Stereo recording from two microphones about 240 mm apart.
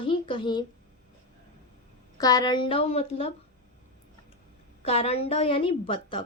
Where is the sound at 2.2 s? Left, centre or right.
Centre.